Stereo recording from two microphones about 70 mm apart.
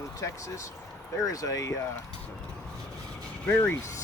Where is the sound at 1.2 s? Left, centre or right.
Left.